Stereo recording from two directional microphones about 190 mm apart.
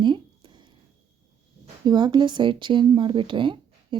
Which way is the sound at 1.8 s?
25° right (ahead or behind).